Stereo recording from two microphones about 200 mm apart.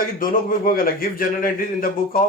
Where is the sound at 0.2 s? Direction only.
45° left (ahead or behind).